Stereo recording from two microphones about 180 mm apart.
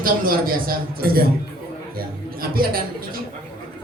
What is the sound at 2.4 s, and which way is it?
Speech, 55° right (ahead or behind).